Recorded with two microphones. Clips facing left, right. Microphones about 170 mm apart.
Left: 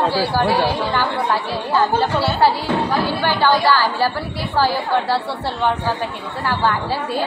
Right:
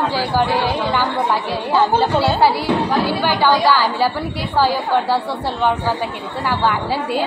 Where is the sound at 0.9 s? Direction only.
15° right (ahead or behind).